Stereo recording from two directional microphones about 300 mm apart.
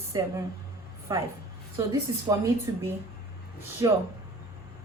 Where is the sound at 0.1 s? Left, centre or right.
Centre.